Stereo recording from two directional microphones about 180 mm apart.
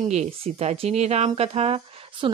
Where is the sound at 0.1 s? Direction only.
40° right (ahead or behind).